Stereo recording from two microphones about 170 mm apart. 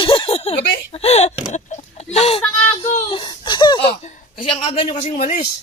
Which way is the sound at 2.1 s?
35° left (ahead or behind).